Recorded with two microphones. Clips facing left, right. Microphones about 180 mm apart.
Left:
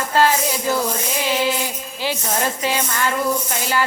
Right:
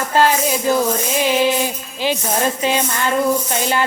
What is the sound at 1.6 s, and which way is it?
Tambourine, 20° right (ahead or behind).